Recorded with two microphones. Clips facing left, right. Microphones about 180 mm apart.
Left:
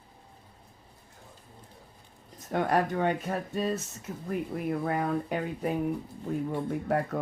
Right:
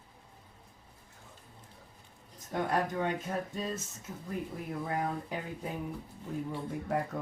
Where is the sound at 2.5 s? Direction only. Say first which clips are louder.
Left 5 dB; 65° left (ahead or behind).